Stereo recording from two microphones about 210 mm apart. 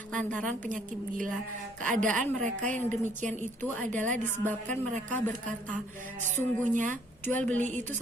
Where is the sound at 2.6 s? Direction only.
10° left (ahead or behind).